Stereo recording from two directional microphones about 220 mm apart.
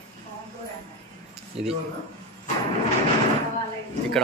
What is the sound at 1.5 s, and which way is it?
Speech, 25° right (ahead or behind).